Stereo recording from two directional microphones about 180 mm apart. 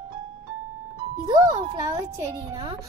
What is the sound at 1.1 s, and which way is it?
A child's voice, 20° right (ahead or behind).